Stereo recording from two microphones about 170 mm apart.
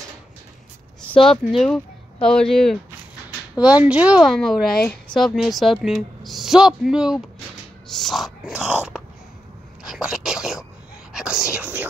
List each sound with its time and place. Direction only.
1.1 s speech: 30° left (ahead or behind)
1.4 s speech: centre (ahead or behind)
9.8 s a sound: 5° right (ahead or behind)
11.1 s whispering: 5° right (ahead or behind)